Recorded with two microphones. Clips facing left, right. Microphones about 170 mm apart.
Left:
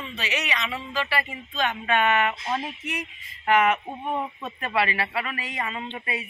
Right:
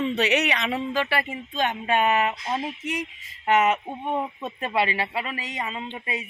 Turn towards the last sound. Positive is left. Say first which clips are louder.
# even
turn(degrees=-20)  # may be behind; listen again after turning